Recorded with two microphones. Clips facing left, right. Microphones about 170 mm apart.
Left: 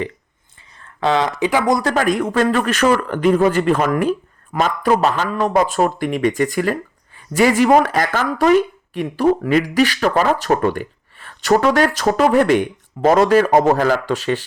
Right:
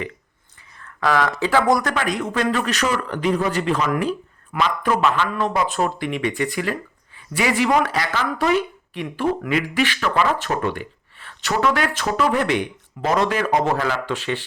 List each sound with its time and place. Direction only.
0.8 s speech: 25° left (ahead or behind)
1.8 s speech: 30° left (ahead or behind)
2.0 s speech: 50° left (ahead or behind)
4.5 s speech: 40° left (ahead or behind)